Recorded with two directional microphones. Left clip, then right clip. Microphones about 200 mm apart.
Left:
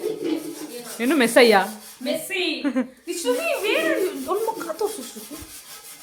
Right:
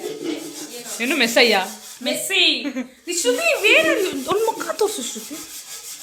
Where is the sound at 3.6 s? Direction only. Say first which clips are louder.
Right 8 dB; 20° right (ahead or behind).